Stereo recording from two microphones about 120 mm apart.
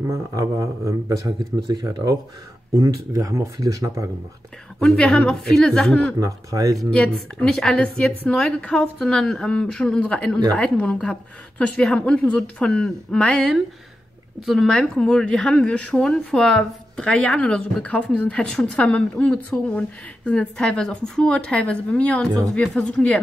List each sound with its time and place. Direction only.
0.1 s speech: 25° right (ahead or behind)
4.7 s a man's voice: 5° left (ahead or behind)
6.1 s speech: 30° right (ahead or behind)
6.9 s a woman's voice: 5° left (ahead or behind)